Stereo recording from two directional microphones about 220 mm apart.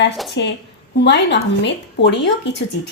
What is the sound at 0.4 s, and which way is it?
Speech, 50° left (ahead or behind).